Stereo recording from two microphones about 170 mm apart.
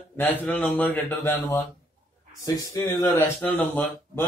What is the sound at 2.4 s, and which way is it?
Speech, 20° left (ahead or behind).